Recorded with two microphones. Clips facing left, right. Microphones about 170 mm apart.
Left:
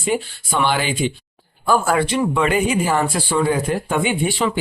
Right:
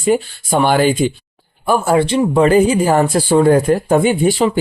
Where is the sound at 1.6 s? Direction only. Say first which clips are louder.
Right 4 dB; 25° right (ahead or behind).